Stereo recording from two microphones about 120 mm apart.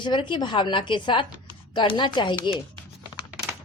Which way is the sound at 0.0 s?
40° left (ahead or behind).